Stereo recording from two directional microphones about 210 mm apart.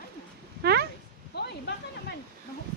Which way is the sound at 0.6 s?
50° right (ahead or behind).